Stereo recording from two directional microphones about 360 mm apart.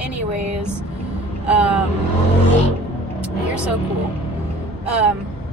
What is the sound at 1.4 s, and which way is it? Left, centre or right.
Speech, centre.